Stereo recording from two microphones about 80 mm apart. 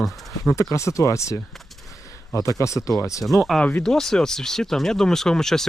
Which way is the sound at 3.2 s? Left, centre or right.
Centre.